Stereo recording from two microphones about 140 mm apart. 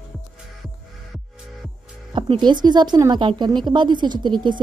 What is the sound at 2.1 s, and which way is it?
A woman's voice, 35° right (ahead or behind).